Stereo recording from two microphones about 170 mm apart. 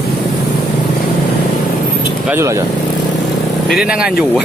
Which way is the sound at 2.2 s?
15° right (ahead or behind).